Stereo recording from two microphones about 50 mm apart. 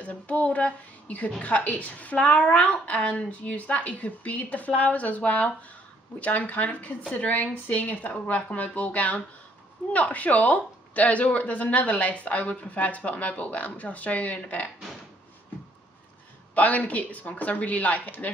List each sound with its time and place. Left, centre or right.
0.0 s a woman's voice: left
16.5 s a woman's voice: left